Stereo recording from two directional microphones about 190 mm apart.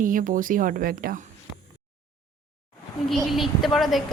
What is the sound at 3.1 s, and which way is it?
Speech, centre (ahead or behind).